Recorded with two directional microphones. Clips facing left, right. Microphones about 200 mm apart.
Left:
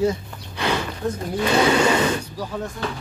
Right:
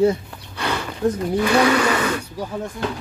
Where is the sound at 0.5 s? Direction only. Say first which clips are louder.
Left 1 dB; 15° left (ahead or behind).